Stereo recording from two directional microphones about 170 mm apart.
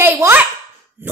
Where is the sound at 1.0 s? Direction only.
10° right (ahead or behind).